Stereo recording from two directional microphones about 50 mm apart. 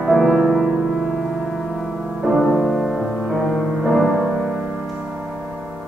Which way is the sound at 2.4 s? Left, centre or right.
Centre.